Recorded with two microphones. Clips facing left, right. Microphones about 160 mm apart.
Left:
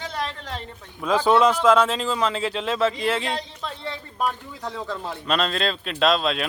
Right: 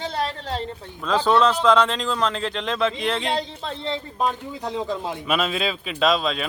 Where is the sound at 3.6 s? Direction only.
25° right (ahead or behind).